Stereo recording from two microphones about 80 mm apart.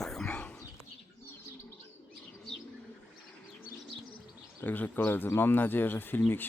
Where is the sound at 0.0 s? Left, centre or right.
Centre.